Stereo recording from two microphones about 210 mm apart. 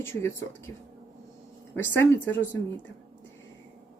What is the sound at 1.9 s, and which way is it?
Speech, 10° left (ahead or behind).